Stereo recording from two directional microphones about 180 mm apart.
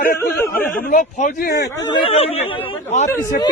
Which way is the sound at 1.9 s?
30° left (ahead or behind).